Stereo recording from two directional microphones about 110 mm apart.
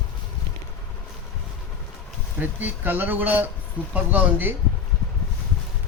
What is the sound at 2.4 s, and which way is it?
Speech, 15° right (ahead or behind).